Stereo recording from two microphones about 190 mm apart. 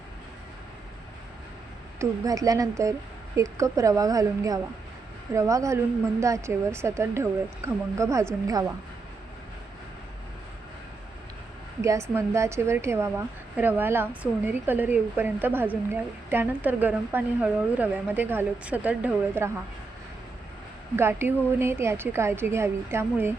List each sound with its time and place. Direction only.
2.0 s a woman's voice: 20° right (ahead or behind)
11.8 s a woman's voice: 15° right (ahead or behind)
20.9 s a woman's voice: 10° right (ahead or behind)